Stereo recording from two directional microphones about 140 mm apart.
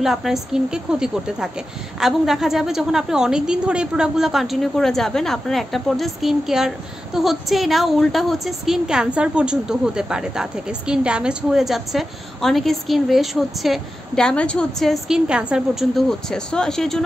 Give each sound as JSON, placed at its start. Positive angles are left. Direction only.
{"t": 0.0, "sound": "a woman's voice", "side_deg": 0}